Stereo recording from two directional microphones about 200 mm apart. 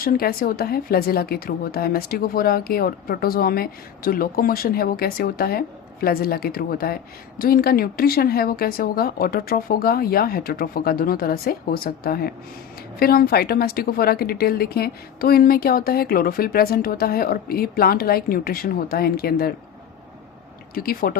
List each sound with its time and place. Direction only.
0.0 s speech: 50° left (ahead or behind)
20.7 s speech: 45° left (ahead or behind)